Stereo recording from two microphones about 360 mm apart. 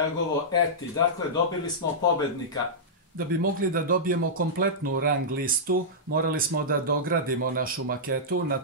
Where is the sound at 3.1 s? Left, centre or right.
Right.